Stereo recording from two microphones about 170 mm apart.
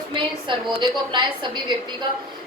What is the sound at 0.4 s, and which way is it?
A woman's voice, 25° right (ahead or behind).